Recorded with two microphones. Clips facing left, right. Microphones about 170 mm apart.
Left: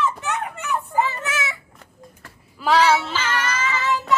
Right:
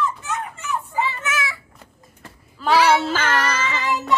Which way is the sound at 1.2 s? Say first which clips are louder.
Right 1 dB; 25° left (ahead or behind).